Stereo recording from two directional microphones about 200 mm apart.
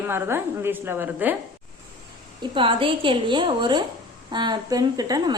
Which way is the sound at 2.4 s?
25° right (ahead or behind).